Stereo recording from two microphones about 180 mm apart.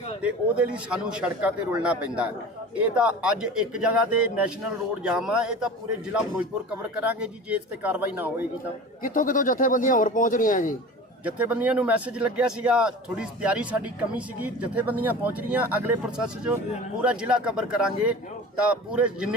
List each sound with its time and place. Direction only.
0.2 s a man's voice: 5° right (ahead or behind)
9.0 s speech: 50° left (ahead or behind)
11.3 s a man's voice: 10° right (ahead or behind)